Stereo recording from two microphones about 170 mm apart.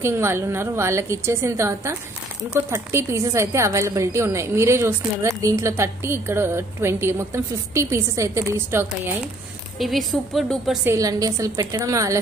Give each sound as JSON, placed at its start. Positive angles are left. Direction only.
{"t": 0.0, "sound": "a woman's voice", "side_deg": -15}
{"t": 9.8, "sound": "a woman's voice", "side_deg": 0}
{"t": 10.8, "sound": "a woman's voice", "side_deg": -15}